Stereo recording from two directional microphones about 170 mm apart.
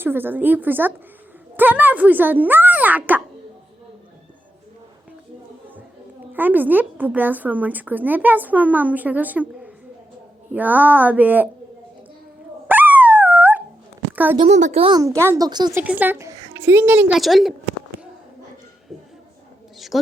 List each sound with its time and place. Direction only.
0.0 s a woman's voice: 10° right (ahead or behind)
6.3 s a woman's voice: 10° right (ahead or behind)
12.6 s dog: 10° right (ahead or behind)
14.4 s speech: 40° right (ahead or behind)
14.9 s speech: 20° right (ahead or behind)
15.8 s a woman's voice: 10° right (ahead or behind)
19.9 s a man's voice: centre (ahead or behind)